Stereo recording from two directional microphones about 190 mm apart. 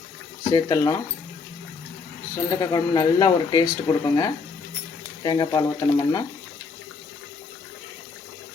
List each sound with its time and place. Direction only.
0.5 s speech: 20° left (ahead or behind)
2.3 s speech: 15° left (ahead or behind)